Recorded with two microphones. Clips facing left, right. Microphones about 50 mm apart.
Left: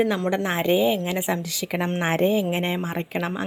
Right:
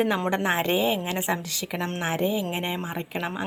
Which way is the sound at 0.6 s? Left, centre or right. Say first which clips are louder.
Left 4 dB; centre.